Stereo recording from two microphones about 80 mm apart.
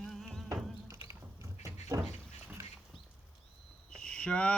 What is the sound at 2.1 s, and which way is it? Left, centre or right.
Goat, right.